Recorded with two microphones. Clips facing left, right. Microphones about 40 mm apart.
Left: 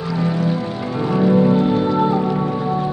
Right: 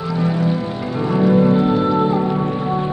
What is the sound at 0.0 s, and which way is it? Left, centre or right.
Music, centre.